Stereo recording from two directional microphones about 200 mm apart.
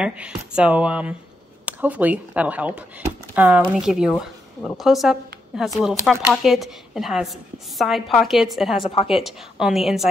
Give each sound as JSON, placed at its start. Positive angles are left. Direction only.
{"t": 0.0, "sound": "a woman's voice", "side_deg": -5}
{"t": 8.9, "sound": "a woman's voice", "side_deg": 30}
{"t": 9.2, "sound": "a woman's voice", "side_deg": 0}